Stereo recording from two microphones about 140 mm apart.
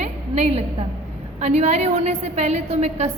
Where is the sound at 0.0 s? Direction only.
50° right (ahead or behind).